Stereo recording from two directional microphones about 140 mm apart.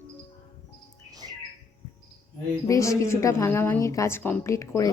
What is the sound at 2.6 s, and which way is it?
A woman's voice, 20° left (ahead or behind).